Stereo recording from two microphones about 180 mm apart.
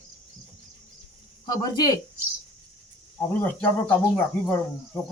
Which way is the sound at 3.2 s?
10° left (ahead or behind).